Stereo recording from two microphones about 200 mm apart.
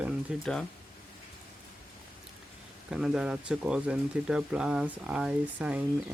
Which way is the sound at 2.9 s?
5° right (ahead or behind).